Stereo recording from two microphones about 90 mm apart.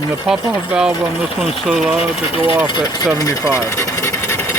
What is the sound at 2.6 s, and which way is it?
Speech, 55° left (ahead or behind).